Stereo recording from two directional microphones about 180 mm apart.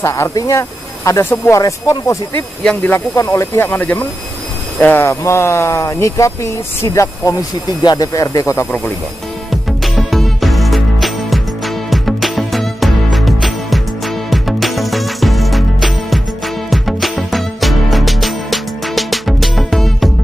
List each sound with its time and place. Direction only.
0.0 s speech: 15° left (ahead or behind)
9.5 s music: centre (ahead or behind)